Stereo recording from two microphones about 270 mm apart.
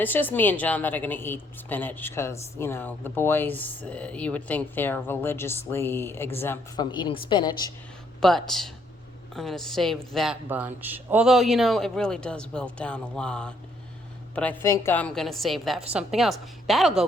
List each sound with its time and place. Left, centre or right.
0.0 s a woman's voice: centre
8.2 s speech: centre